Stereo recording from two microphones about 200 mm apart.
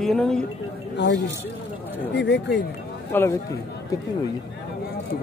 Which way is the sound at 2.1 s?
60° left (ahead or behind).